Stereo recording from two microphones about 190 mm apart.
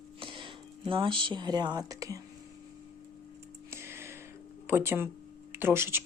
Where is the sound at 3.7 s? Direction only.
15° right (ahead or behind).